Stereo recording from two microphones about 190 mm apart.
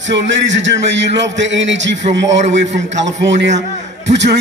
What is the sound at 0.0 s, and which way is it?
A man's voice, 70° right (ahead or behind).